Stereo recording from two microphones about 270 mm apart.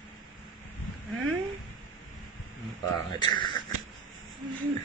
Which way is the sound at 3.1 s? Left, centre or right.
Centre.